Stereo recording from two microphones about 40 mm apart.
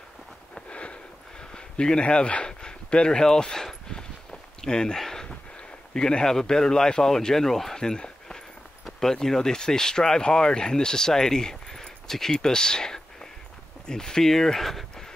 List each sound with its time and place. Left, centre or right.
0.7 s sniff: left
1.4 s speech: centre
3.9 s walk: centre
4.9 s a sound: centre
5.9 s speech: centre
7.8 s a sound: centre
9.0 s speech: centre